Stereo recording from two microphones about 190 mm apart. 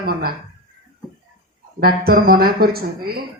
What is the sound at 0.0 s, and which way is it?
Speech, 50° right (ahead or behind).